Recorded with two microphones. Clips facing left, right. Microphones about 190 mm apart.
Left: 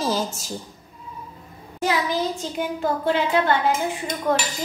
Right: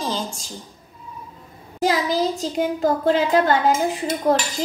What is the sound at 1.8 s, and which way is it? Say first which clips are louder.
A child's voice: right 3 dB; 35° right (ahead or behind).